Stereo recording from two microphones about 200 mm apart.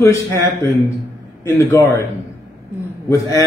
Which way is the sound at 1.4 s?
15° left (ahead or behind).